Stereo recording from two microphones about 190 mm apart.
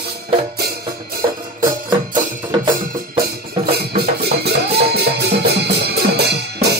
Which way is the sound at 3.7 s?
55° right (ahead or behind).